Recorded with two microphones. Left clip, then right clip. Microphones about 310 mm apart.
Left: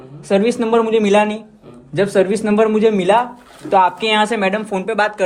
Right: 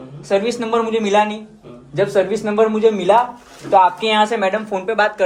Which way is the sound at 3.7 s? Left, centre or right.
Left.